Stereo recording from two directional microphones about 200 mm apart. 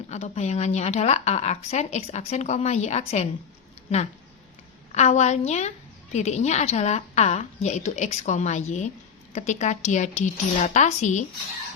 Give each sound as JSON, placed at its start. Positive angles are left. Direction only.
{"t": 0.1, "sound": "speech", "side_deg": 35}
{"t": 4.9, "sound": "speech", "side_deg": 35}